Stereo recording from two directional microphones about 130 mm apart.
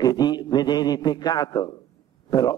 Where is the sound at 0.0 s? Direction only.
30° left (ahead or behind).